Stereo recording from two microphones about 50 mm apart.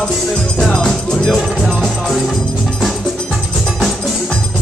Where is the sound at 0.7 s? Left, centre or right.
Centre.